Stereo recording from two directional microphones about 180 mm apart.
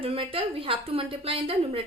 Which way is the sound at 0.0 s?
30° right (ahead or behind).